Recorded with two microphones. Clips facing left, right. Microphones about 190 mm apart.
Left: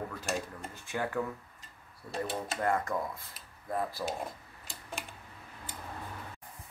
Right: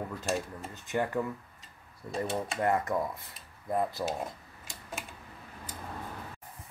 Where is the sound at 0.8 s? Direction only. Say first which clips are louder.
Right 3 dB; 20° right (ahead or behind).